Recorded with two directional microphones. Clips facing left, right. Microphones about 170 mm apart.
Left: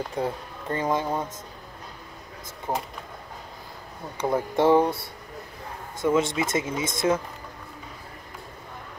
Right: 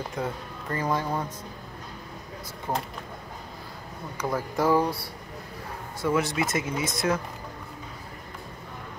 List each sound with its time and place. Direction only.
0.2 s speech: 25° left (ahead or behind)
2.7 s speech: 15° left (ahead or behind)
4.2 s speech: 25° left (ahead or behind)